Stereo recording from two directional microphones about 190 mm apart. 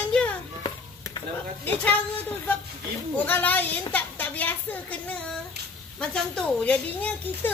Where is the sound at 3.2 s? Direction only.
10° left (ahead or behind).